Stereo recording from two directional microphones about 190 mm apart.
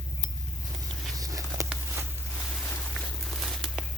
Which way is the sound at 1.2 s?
15° right (ahead or behind).